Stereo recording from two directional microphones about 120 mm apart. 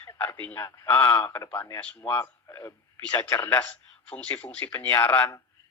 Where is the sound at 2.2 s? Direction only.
25° left (ahead or behind).